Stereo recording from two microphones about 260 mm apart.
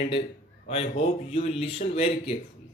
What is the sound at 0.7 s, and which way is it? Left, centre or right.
Speech, left.